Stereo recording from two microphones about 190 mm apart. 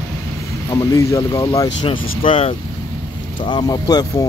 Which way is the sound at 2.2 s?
30° left (ahead or behind).